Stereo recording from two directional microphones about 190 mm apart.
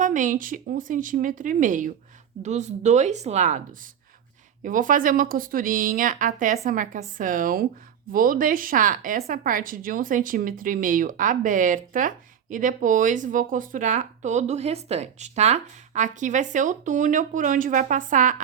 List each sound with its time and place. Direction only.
0.0 s speech: 40° right (ahead or behind)